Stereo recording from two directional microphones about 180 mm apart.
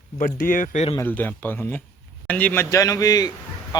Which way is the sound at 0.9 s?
10° left (ahead or behind).